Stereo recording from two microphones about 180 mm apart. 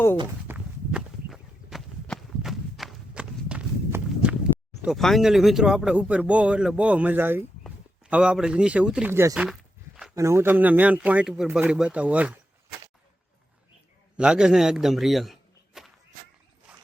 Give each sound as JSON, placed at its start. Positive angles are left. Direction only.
{"t": 0.4, "sound": "walk", "side_deg": -5}
{"t": 4.8, "sound": "a man's voice", "side_deg": 0}
{"t": 14.2, "sound": "a man's voice", "side_deg": -5}